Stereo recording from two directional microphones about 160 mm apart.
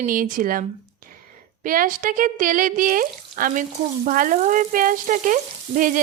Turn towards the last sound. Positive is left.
turn(degrees=-55)  # may be behind; listen again after turning